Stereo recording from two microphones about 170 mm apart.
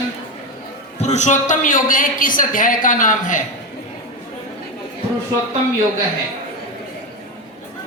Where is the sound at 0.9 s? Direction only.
40° left (ahead or behind).